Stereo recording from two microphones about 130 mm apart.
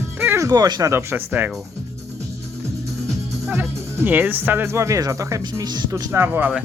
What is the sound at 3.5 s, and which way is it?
Speech, 20° right (ahead or behind).